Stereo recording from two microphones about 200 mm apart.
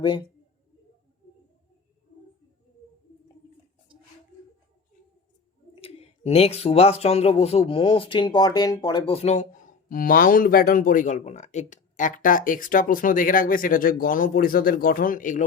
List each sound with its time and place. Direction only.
0.0 s speech: 20° left (ahead or behind)
5.7 s speech: 30° left (ahead or behind)